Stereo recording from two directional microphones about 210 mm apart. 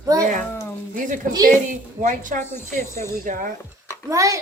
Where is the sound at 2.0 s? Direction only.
35° right (ahead or behind).